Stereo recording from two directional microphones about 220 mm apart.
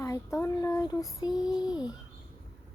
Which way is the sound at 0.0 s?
15° left (ahead or behind).